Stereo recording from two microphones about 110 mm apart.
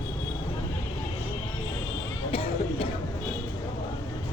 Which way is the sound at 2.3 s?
55° left (ahead or behind).